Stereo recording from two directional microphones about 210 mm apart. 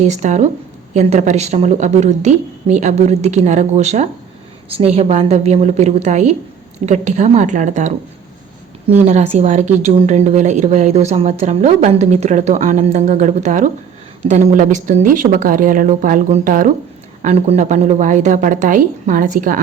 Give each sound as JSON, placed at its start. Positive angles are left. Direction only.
{"t": 0.0, "sound": "speech", "side_deg": -35}
{"t": 9.0, "sound": "speech", "side_deg": -35}